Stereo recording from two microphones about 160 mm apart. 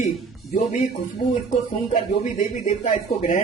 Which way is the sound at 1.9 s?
50° left (ahead or behind).